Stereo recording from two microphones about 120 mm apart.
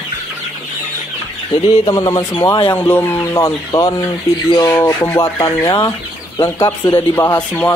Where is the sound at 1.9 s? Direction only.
30° left (ahead or behind).